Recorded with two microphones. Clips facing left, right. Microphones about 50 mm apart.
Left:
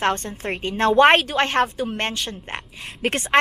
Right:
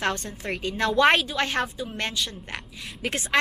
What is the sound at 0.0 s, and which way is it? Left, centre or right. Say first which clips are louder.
A woman's voice: left 5 dB; left.